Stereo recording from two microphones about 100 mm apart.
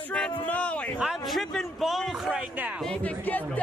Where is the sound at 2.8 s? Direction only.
15° left (ahead or behind).